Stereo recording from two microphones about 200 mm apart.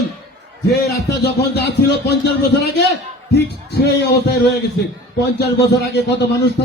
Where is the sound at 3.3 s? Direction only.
55° left (ahead or behind).